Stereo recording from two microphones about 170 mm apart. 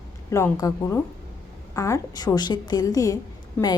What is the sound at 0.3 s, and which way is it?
A woman's voice, 15° left (ahead or behind).